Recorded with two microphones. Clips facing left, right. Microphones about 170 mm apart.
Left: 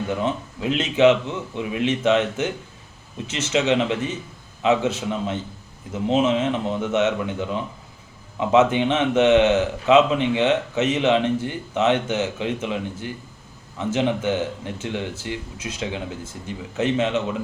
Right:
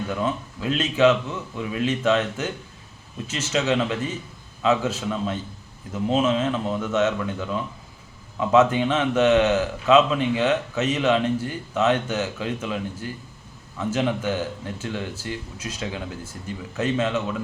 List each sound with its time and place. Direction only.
0.1 s speech: 20° left (ahead or behind)